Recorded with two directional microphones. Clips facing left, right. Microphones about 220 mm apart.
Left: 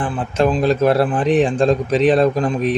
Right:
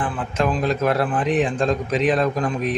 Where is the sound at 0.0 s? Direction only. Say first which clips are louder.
Left 5 dB; 30° left (ahead or behind).